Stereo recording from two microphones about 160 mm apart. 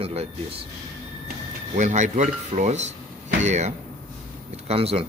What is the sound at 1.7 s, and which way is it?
Speech, 50° right (ahead or behind).